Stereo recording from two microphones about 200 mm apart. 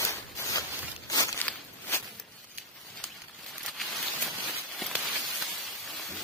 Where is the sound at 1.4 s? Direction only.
5° left (ahead or behind).